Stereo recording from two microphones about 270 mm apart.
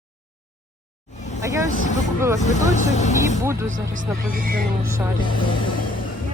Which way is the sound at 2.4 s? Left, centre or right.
Left.